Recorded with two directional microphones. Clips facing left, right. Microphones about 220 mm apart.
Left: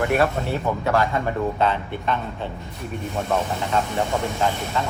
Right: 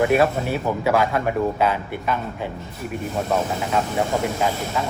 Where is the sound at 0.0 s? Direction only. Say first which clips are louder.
Right 3 dB; 15° right (ahead or behind).